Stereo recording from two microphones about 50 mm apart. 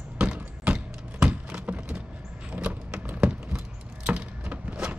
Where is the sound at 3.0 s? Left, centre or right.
Right.